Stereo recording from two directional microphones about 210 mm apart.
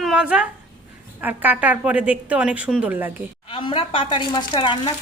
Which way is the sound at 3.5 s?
25° left (ahead or behind).